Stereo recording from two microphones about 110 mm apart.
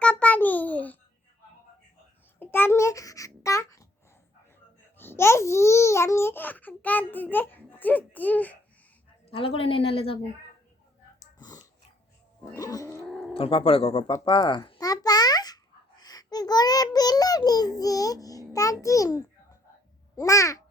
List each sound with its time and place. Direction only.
0.0 s a sound: 10° left (ahead or behind)
2.4 s babbling: 20° left (ahead or behind)
4.9 s speech: 20° left (ahead or behind)
9.2 s a woman's voice: 60° left (ahead or behind)
11.3 s dog: 35° left (ahead or behind)
12.5 s a sound: 35° left (ahead or behind)
13.3 s a woman's voice: 55° left (ahead or behind)
14.1 s a child's voice: 35° left (ahead or behind)